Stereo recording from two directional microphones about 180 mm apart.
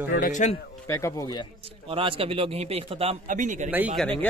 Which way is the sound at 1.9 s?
30° right (ahead or behind).